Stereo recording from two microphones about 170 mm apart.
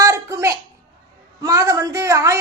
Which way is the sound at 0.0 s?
20° right (ahead or behind).